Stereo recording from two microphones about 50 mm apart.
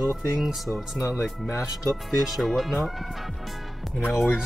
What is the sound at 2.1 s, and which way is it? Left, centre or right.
Speech, centre.